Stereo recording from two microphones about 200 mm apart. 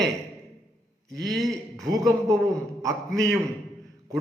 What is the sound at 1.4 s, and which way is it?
A man's voice, 15° right (ahead or behind).